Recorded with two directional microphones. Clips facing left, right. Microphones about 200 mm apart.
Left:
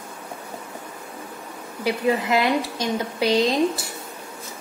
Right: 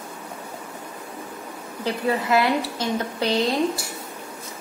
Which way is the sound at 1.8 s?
15° left (ahead or behind).